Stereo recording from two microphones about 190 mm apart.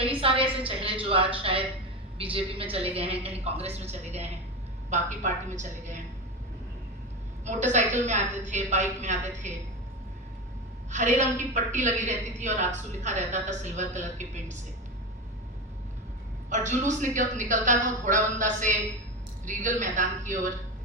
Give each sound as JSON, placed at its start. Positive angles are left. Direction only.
{"t": 0.0, "sound": "a sound", "side_deg": -30}
{"t": 2.3, "sound": "a woman's voice", "side_deg": -30}
{"t": 7.4, "sound": "a woman's voice", "side_deg": -40}
{"t": 10.9, "sound": "a woman's voice", "side_deg": -40}
{"t": 16.5, "sound": "a woman's voice", "side_deg": -40}